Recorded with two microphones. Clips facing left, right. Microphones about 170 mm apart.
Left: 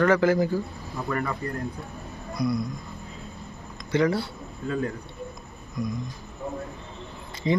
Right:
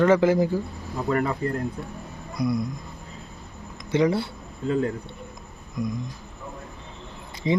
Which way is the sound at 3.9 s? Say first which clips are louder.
Right 2 dB; 20° right (ahead or behind).